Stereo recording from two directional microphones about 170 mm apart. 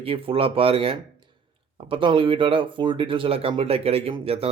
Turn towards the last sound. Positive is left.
turn(degrees=-35)  # may be behind; listen again after turning